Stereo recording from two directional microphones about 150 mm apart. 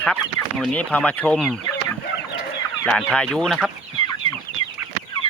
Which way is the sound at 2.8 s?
5° left (ahead or behind).